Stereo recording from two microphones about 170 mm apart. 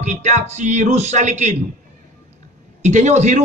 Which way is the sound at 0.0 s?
45° right (ahead or behind).